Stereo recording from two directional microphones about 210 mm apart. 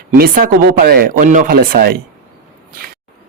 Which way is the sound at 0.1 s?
40° right (ahead or behind).